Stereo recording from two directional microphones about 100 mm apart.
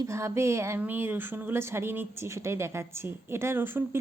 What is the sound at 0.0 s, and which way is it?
Speech, 30° right (ahead or behind).